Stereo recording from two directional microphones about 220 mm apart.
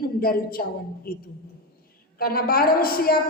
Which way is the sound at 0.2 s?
40° left (ahead or behind).